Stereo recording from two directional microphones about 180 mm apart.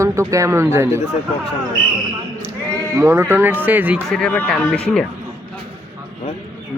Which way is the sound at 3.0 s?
15° right (ahead or behind).